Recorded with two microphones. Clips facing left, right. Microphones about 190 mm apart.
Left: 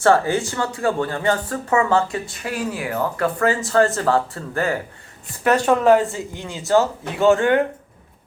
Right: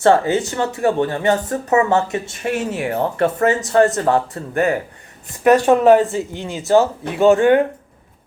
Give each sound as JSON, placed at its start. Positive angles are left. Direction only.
{"t": 0.0, "sound": "speech", "side_deg": -20}